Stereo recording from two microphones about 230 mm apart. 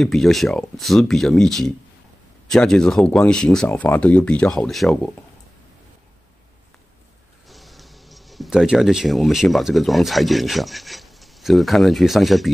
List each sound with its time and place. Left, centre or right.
0.0 s speech: centre
7.4 s speech: centre